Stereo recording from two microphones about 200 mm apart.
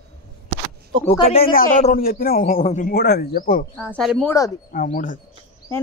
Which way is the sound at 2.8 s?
50° left (ahead or behind).